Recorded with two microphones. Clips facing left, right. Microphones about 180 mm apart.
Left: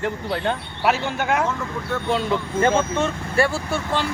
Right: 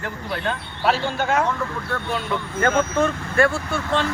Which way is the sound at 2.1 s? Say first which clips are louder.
Left 5 dB; 25° left (ahead or behind).